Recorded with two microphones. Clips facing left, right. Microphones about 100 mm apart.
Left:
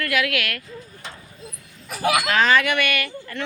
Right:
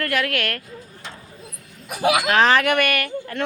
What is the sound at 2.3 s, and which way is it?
Speech, 50° right (ahead or behind).